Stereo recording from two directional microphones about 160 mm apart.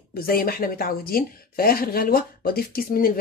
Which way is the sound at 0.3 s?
65° left (ahead or behind).